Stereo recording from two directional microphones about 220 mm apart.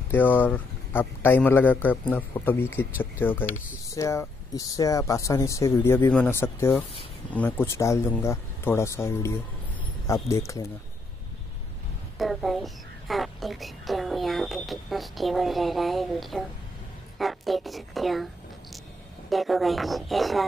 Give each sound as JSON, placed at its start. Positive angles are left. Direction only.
{"t": 0.1, "sound": "speech", "side_deg": 10}
{"t": 12.2, "sound": "a child's voice", "side_deg": 0}